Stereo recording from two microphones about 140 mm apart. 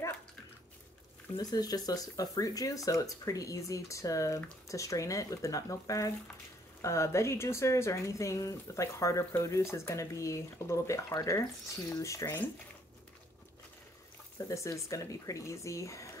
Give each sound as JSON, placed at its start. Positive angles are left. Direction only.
{"t": 1.3, "sound": "speech", "side_deg": 30}
{"t": 14.5, "sound": "speech", "side_deg": 20}